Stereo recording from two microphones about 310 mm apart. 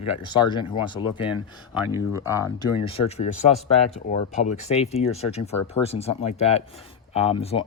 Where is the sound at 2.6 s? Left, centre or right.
Centre.